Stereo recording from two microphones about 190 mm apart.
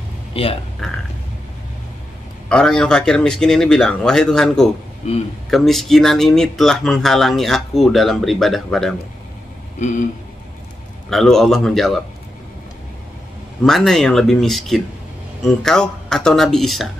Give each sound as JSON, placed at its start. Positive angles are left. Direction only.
{"t": 0.3, "sound": "speech", "side_deg": 30}
{"t": 0.8, "sound": "speech", "side_deg": 0}
{"t": 2.5, "sound": "speech", "side_deg": 5}
{"t": 5.0, "sound": "speech", "side_deg": 35}
{"t": 5.5, "sound": "speech", "side_deg": 0}
{"t": 9.8, "sound": "speech", "side_deg": 40}
{"t": 11.1, "sound": "speech", "side_deg": 0}
{"t": 13.7, "sound": "speech", "side_deg": 0}